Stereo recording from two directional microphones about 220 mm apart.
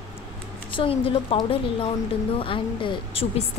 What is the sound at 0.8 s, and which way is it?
Speech, 25° left (ahead or behind).